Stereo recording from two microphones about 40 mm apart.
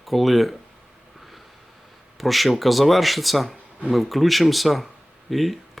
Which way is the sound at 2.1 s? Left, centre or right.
Centre.